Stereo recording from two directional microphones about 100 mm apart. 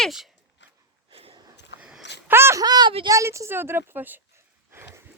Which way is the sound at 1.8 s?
10° right (ahead or behind).